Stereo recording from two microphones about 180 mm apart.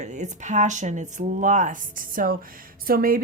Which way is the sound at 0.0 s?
40° right (ahead or behind).